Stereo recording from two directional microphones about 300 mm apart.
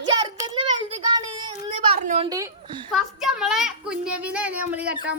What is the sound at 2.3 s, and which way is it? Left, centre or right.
Speech, centre.